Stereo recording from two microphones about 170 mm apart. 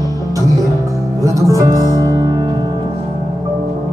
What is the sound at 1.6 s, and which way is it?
Music, 20° right (ahead or behind).